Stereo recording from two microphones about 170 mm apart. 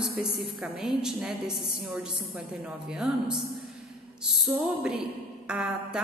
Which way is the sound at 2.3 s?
5° right (ahead or behind).